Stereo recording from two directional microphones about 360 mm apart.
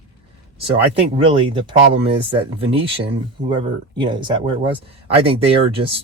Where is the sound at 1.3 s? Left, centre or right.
Centre.